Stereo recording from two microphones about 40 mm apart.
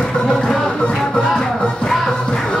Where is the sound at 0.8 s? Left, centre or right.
Left.